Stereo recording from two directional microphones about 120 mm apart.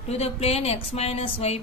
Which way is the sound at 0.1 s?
60° left (ahead or behind).